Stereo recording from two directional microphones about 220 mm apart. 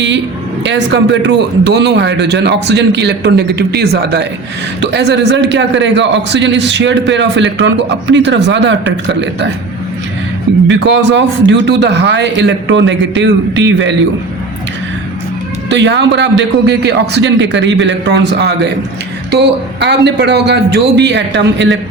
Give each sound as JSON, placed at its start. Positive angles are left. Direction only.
{"t": 0.6, "sound": "a man's voice", "side_deg": -55}
{"t": 10.7, "sound": "a man's voice", "side_deg": -50}
{"t": 15.7, "sound": "a man's voice", "side_deg": -55}